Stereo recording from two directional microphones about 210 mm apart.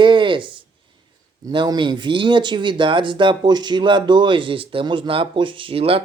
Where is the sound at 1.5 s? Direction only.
20° right (ahead or behind).